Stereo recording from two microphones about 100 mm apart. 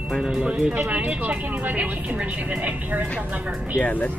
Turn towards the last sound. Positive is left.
turn(degrees=15)  # may be behind; listen again after turning